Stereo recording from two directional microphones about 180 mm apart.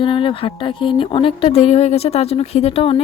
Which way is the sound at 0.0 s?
25° left (ahead or behind).